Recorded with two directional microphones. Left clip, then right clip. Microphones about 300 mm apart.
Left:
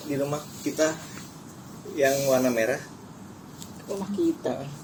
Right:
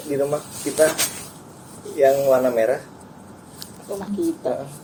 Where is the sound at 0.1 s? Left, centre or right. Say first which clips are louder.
Right 7 dB; left.